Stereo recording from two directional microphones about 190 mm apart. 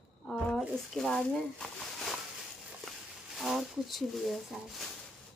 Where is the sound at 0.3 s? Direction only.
5° left (ahead or behind).